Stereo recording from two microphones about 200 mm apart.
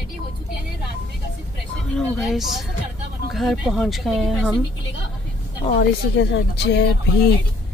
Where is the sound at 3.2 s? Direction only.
Centre (ahead or behind).